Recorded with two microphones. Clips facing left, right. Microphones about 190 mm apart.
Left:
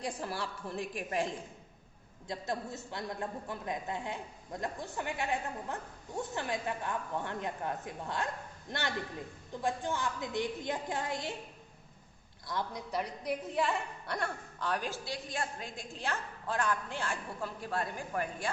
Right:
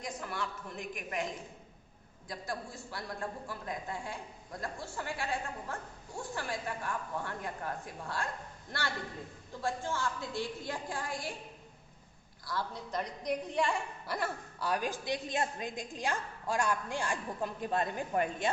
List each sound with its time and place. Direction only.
0.0 s a woman's voice: 30° left (ahead or behind)
12.5 s a woman's voice: 15° left (ahead or behind); by 18.5 s 25° right (ahead or behind)